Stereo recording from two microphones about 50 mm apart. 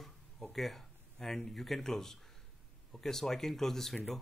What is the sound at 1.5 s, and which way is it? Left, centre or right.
A man's voice, centre.